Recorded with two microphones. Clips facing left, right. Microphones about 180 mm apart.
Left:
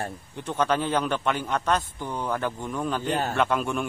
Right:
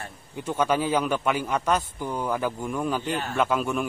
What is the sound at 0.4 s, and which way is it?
A man's voice, 10° right (ahead or behind).